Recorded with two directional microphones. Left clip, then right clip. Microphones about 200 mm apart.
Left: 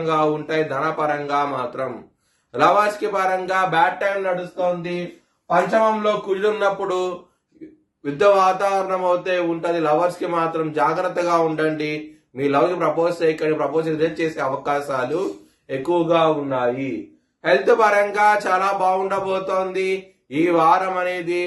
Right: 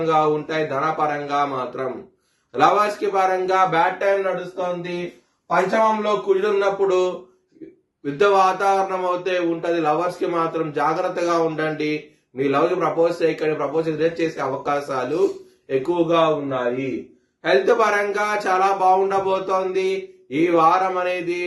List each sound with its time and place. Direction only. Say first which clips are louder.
0.0 s speech: right 1 dB; 25° left (ahead or behind)
6.0 s speech: right 1 dB; 25° left (ahead or behind)
8.0 s speech: left 1 dB; 15° left (ahead or behind)
17.7 s speech: left 2 dB; 20° left (ahead or behind)